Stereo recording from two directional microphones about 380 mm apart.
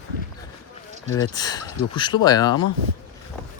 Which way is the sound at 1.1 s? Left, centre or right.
Centre.